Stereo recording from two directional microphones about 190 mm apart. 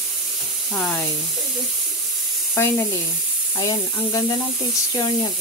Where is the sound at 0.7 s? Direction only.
5° left (ahead or behind).